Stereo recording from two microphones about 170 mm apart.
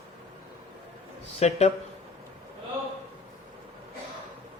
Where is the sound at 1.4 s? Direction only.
40° left (ahead or behind).